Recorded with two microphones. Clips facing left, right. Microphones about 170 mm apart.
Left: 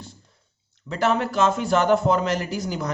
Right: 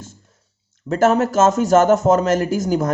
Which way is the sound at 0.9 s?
45° right (ahead or behind).